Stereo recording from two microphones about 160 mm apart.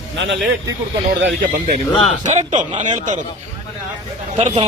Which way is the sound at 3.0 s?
50° right (ahead or behind).